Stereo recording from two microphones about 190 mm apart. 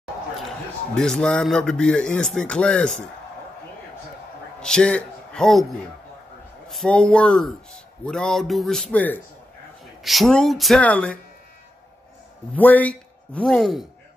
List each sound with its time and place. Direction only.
0.9 s a man's voice: 5° left (ahead or behind)
4.6 s a man's voice: 5° left (ahead or behind)
6.7 s a man's voice: 5° left (ahead or behind)
12.5 s speech: 10° left (ahead or behind)